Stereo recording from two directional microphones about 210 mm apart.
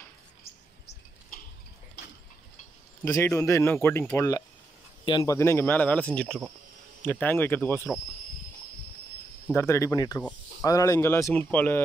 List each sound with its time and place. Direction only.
1.3 s tick-tock: 45° left (ahead or behind)
3.1 s speech: 15° left (ahead or behind)
9.5 s speech: 15° left (ahead or behind)